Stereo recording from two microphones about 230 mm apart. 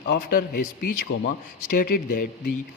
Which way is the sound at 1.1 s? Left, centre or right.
Left.